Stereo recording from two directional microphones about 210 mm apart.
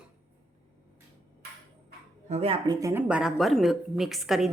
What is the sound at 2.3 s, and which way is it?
Speech, 30° right (ahead or behind).